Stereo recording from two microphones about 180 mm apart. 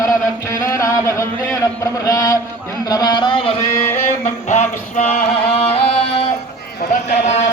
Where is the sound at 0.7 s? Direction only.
15° left (ahead or behind).